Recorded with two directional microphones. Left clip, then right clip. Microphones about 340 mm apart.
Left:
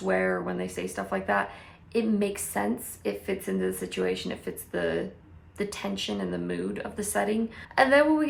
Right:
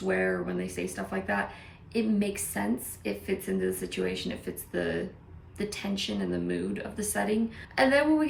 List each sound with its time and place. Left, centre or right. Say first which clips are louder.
0.1 s a woman's voice: left 2 dB; centre